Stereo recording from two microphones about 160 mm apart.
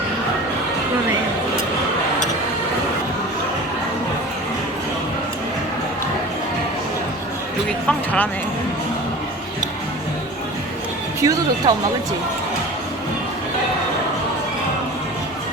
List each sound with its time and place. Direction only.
7.9 s speech: 5° left (ahead or behind)
11.2 s speech: 20° right (ahead or behind)